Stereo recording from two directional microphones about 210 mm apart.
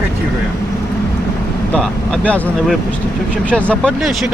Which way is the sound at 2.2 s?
5° left (ahead or behind).